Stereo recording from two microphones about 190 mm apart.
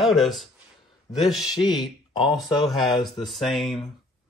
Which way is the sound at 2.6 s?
Centre (ahead or behind).